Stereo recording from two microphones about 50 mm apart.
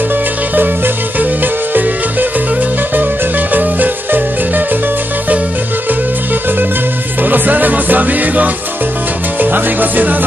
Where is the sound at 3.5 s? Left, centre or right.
Right.